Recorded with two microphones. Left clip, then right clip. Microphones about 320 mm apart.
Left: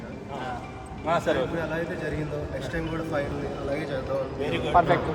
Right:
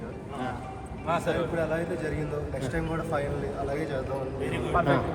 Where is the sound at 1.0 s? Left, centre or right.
Left.